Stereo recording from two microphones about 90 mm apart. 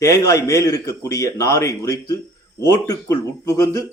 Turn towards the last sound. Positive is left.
turn(degrees=40)  # may be behind; listen again after turning